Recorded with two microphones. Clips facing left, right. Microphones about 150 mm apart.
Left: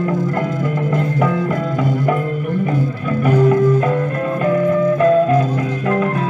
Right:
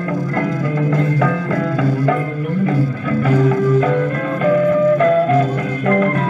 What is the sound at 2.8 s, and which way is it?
Music, 15° left (ahead or behind).